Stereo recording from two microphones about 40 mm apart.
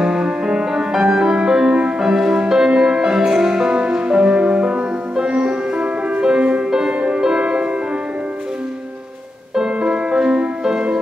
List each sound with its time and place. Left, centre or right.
0.0 s music: centre
9.8 s music: right